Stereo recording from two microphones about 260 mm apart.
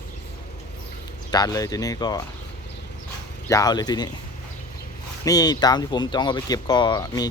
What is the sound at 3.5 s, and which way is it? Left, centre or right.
Speech, centre.